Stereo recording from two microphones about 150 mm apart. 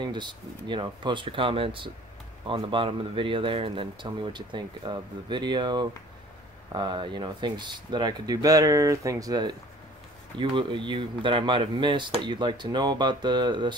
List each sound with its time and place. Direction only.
0.0 s speech: 30° right (ahead or behind)